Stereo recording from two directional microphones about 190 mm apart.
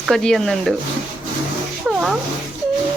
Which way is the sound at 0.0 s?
Centre (ahead or behind).